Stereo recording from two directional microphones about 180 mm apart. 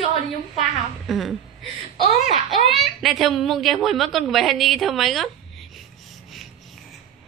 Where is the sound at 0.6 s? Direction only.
Centre (ahead or behind).